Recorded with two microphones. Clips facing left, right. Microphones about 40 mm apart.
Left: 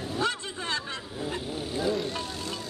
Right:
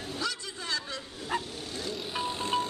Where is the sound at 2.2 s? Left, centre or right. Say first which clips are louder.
Right 5 dB; right.